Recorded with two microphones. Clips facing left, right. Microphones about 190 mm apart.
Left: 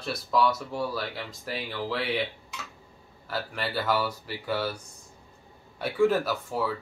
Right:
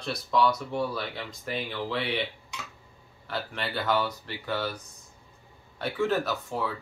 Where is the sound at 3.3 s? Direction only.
5° left (ahead or behind).